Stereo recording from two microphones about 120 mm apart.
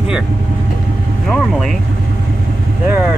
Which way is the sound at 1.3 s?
Centre (ahead or behind).